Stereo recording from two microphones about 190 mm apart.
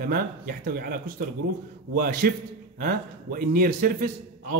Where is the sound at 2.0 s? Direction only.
50° right (ahead or behind).